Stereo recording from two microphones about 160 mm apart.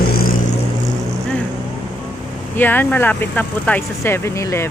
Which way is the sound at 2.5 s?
10° left (ahead or behind).